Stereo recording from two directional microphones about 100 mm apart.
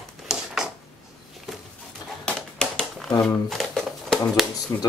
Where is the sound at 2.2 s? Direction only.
5° left (ahead or behind).